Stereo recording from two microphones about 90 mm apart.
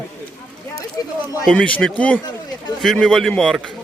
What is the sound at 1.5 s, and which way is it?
Speech, 10° left (ahead or behind).